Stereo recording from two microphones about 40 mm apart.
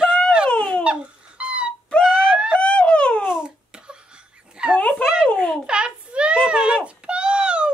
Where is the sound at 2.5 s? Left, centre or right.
Left.